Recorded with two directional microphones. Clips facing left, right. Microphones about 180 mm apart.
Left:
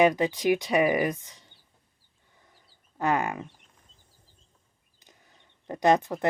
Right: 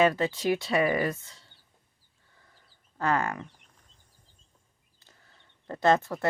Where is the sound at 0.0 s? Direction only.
15° left (ahead or behind).